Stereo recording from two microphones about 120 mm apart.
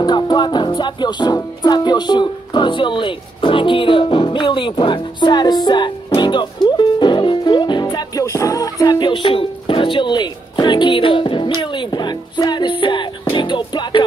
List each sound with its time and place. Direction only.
0.0 s music: 35° left (ahead or behind)